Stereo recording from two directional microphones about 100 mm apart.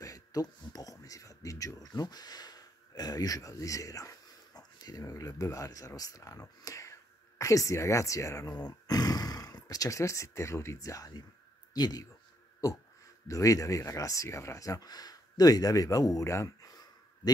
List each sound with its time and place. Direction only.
0.0 s speech: 35° left (ahead or behind)
12.6 s a sound: 35° left (ahead or behind)
13.3 s speech: 35° left (ahead or behind)